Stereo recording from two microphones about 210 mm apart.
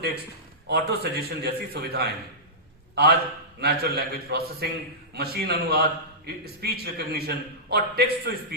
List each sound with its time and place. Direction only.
0.7 s a man's voice: 50° right (ahead or behind)